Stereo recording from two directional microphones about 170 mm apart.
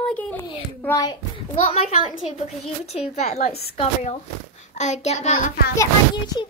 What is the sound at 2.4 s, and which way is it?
Speech, 40° left (ahead or behind).